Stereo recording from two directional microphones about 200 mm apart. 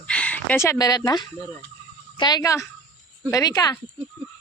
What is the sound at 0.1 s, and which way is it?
Speech, 5° left (ahead or behind).